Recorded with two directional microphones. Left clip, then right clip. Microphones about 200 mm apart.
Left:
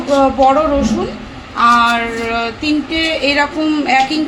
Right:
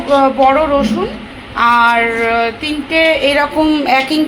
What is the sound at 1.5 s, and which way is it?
Female singing, 15° right (ahead or behind).